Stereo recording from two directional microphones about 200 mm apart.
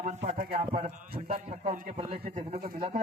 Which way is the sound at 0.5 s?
30° right (ahead or behind).